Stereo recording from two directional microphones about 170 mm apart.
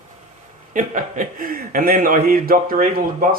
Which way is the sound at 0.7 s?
50° right (ahead or behind).